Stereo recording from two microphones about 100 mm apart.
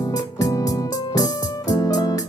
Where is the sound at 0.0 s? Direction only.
35° left (ahead or behind).